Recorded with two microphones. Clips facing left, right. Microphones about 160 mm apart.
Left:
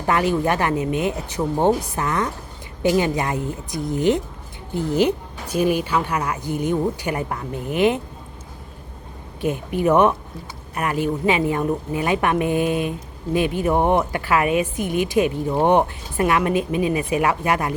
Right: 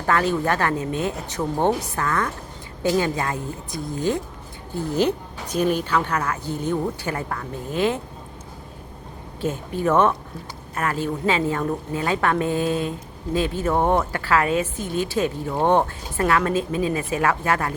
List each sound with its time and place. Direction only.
0.0 s a woman's voice: 15° left (ahead or behind)
9.4 s a woman's voice: 15° left (ahead or behind)